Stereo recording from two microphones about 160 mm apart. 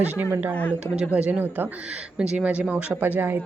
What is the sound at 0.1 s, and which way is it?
Speech, 10° right (ahead or behind).